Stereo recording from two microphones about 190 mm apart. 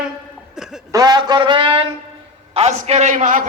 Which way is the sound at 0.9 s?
20° right (ahead or behind).